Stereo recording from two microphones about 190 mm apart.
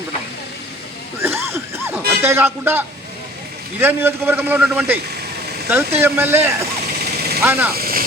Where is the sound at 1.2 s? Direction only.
15° right (ahead or behind).